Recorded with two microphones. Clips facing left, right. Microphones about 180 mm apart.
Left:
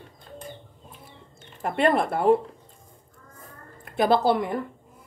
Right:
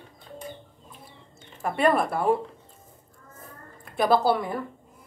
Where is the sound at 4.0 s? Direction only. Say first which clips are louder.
Left 1 dB; 20° left (ahead or behind).